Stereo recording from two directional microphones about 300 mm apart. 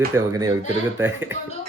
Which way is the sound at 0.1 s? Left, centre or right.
Centre.